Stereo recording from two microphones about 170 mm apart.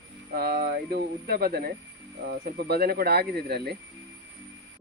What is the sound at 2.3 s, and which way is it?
Speech, 80° right.